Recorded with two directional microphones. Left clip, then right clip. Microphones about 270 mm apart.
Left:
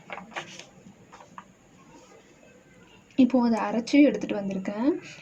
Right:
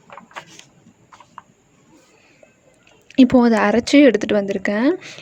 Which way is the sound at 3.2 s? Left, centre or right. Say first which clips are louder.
Right 10 dB; right.